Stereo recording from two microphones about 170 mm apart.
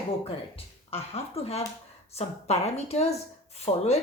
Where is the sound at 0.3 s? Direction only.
35° left (ahead or behind).